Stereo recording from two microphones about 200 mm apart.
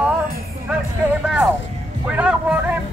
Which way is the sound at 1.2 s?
5° right (ahead or behind).